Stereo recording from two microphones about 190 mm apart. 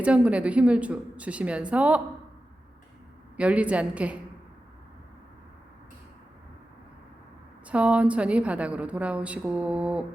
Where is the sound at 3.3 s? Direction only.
5° right (ahead or behind).